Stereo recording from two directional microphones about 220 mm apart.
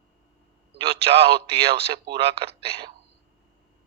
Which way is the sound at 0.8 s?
25° right (ahead or behind).